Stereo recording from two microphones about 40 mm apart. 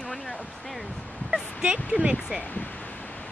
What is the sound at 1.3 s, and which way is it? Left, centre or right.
Speech, right.